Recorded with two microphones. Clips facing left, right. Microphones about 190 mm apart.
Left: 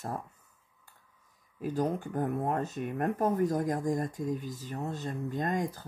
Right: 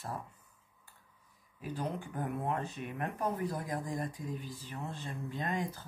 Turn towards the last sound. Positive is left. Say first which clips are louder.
# left 5 dB
turn(degrees=45)  # may be behind; listen again after turning